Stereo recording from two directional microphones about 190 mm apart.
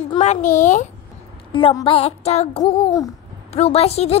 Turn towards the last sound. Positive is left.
turn(degrees=30)  # may be behind; listen again after turning